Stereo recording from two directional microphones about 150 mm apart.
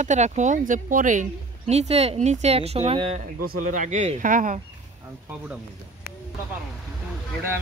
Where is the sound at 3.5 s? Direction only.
60° right (ahead or behind).